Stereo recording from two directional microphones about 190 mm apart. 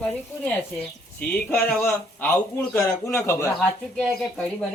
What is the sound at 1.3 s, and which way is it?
Speech, 5° left (ahead or behind).